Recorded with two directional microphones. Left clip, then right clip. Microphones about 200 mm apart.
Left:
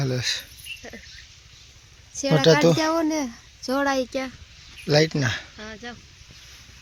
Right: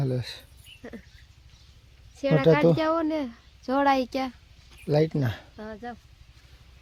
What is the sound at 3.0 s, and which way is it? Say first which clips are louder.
Speech: left 3 dB; 45° left (ahead or behind).